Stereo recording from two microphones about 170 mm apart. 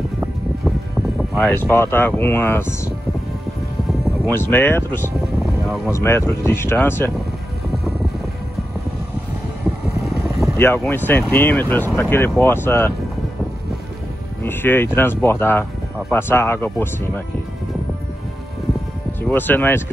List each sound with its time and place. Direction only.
1.5 s speech: 10° left (ahead or behind)
4.3 s speech: 15° left (ahead or behind)
10.0 s vehicle: centre (ahead or behind)
10.6 s speech: 15° left (ahead or behind)
14.4 s speech: 15° left (ahead or behind)
19.2 s speech: 10° left (ahead or behind)